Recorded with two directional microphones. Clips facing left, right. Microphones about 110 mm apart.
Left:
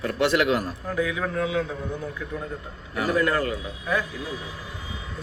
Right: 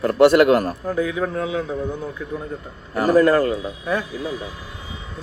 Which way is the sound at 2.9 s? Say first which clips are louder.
Right 8 dB; 40° right (ahead or behind).